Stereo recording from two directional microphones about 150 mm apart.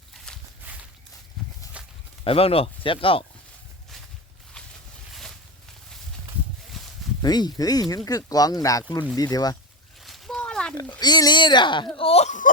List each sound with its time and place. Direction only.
1.4 s walk: centre (ahead or behind)
1.8 s walk: 10° right (ahead or behind)
2.2 s speech: 40° left (ahead or behind)
6.8 s a sound: centre (ahead or behind)
7.2 s speech: 30° left (ahead or behind)
10.0 s a sound: centre (ahead or behind)
11.0 s speech: 30° left (ahead or behind); by 12.5 s 50° left (ahead or behind)